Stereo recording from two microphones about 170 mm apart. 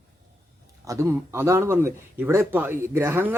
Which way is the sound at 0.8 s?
15° right (ahead or behind).